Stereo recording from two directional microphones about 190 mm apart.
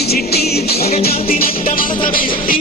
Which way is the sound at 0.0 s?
55° left (ahead or behind).